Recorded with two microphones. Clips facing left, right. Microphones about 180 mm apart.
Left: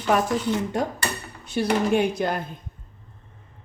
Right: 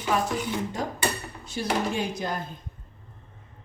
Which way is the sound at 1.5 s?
65° left (ahead or behind).